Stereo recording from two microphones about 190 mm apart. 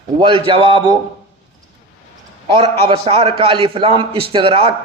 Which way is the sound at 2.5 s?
30° right (ahead or behind).